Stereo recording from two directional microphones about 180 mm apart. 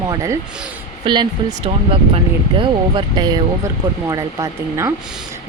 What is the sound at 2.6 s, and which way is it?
Speech, 25° right (ahead or behind).